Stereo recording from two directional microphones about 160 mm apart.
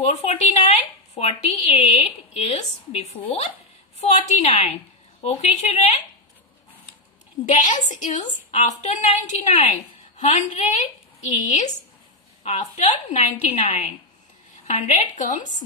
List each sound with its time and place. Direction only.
0.0 s a woman's voice: 40° left (ahead or behind)
7.4 s a woman's voice: 50° left (ahead or behind)